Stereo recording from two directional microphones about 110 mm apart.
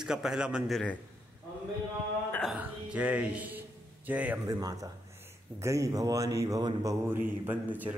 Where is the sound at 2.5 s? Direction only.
10° right (ahead or behind).